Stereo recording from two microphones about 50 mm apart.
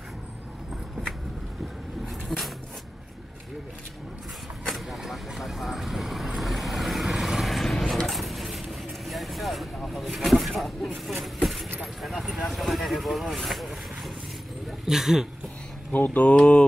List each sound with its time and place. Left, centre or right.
2.2 s a sound: centre
4.6 s vehicle: centre
9.9 s a sound: centre
10.8 s speech: centre
11.8 s vehicle: centre
14.9 s speech: centre
15.9 s mantra: left